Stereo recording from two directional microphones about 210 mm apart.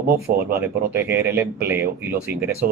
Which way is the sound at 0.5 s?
10° right (ahead or behind).